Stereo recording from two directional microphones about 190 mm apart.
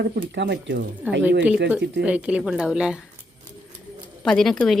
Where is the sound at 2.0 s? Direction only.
5° right (ahead or behind).